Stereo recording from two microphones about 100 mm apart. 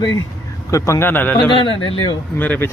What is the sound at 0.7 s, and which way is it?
Speech, 30° left (ahead or behind).